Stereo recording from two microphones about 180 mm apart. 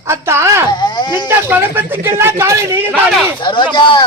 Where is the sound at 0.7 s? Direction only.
25° left (ahead or behind).